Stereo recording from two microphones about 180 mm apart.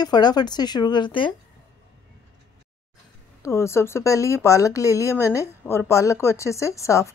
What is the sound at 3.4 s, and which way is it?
Speech, 15° left (ahead or behind).